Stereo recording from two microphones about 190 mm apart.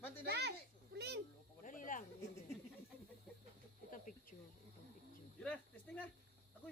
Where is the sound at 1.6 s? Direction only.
45° left (ahead or behind).